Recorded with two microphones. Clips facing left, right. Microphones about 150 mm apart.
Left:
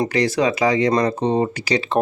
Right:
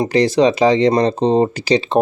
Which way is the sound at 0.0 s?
30° right (ahead or behind).